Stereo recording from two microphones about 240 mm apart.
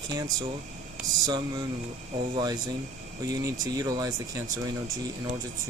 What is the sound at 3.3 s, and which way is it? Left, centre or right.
Speech, centre.